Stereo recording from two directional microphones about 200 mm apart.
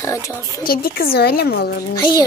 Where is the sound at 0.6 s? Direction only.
50° left (ahead or behind).